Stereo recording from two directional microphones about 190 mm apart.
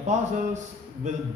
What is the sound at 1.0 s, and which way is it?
Speech, 40° right (ahead or behind).